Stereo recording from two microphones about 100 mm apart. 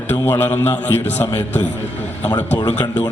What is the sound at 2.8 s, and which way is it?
Speech, 45° left (ahead or behind).